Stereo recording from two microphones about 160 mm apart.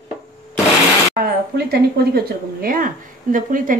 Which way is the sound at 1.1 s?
75° right (ahead or behind).